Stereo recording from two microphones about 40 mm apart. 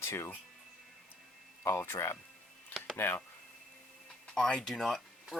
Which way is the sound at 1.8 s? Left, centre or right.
Left.